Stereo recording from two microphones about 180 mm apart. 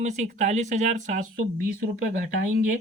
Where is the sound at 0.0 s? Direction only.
40° right (ahead or behind).